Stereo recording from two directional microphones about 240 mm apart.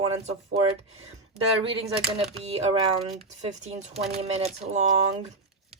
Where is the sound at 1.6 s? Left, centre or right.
Right.